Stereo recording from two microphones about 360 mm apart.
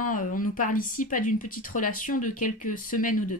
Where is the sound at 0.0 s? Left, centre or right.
Left.